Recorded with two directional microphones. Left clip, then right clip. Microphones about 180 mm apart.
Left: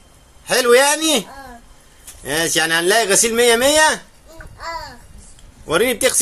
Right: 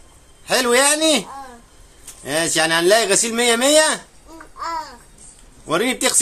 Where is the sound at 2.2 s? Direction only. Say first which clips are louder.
Left 1 dB; 5° right (ahead or behind).